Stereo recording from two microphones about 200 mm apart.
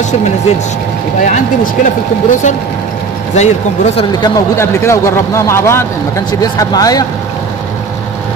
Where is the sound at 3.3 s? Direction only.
35° left (ahead or behind).